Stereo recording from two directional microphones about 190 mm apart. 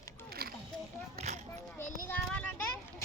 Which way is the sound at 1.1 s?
35° right (ahead or behind).